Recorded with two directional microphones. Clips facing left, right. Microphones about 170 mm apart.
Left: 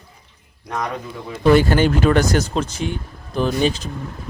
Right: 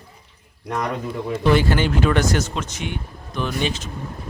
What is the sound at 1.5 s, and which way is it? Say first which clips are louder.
Speech: left 5 dB; 45° left (ahead or behind).